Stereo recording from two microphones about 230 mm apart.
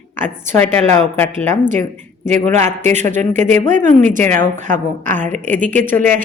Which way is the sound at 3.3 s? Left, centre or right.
Right.